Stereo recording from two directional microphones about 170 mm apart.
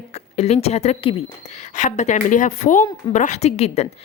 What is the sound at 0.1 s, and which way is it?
A woman's voice, 40° left (ahead or behind).